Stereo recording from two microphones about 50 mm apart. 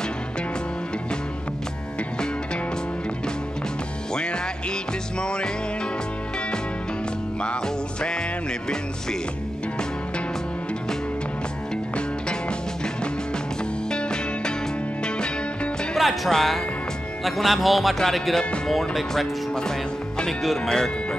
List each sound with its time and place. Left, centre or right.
4.1 s music: centre
7.4 s music: centre
13.8 s music: centre
16.0 s speech: centre